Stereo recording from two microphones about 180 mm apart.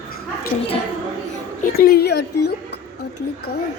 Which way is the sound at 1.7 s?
60° left (ahead or behind).